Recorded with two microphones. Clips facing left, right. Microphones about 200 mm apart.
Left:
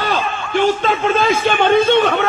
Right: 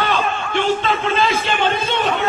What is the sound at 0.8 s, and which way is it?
A man's voice, 50° left (ahead or behind).